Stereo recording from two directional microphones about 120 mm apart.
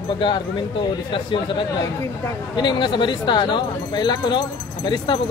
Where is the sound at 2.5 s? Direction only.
40° left (ahead or behind).